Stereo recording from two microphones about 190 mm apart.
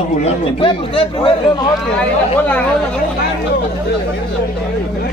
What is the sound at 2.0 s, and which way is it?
Speech, 10° left (ahead or behind).